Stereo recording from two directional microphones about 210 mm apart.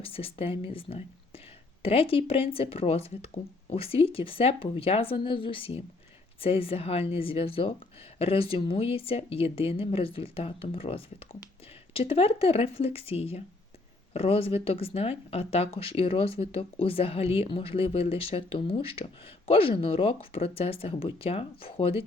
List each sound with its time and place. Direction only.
0.0 s speech: 25° left (ahead or behind)